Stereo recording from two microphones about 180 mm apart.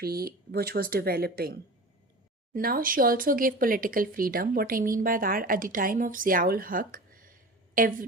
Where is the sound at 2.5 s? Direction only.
55° right (ahead or behind).